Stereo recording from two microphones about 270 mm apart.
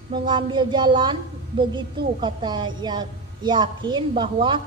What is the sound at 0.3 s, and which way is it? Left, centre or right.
Speech, centre.